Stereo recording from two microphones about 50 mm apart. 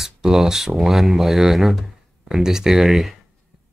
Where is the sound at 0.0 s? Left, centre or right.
Centre.